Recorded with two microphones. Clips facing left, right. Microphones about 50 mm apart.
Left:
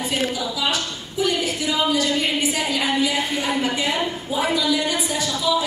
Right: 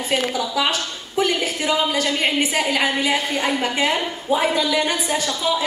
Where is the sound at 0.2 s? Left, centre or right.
Right.